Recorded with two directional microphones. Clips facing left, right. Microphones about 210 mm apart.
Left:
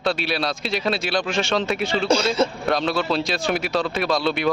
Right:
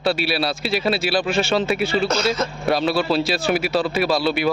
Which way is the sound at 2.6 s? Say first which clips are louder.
Right 2 dB; 5° right (ahead or behind).